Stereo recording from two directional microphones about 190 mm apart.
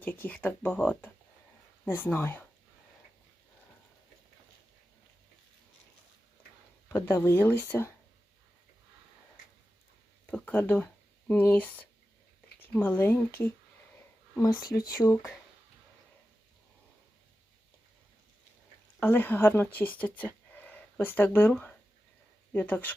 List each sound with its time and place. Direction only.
0.0 s speech: 10° left (ahead or behind)
6.8 s speech: 10° left (ahead or behind)
10.3 s speech: 10° left (ahead or behind)
14.8 s speech: 15° left (ahead or behind)
18.9 s speech: 10° left (ahead or behind)